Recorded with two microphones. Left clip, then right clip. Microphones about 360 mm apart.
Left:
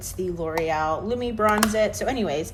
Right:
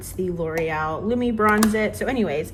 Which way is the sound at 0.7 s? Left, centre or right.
Centre.